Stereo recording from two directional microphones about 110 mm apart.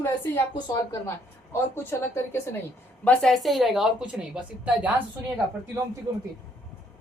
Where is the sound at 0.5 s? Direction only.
35° left (ahead or behind).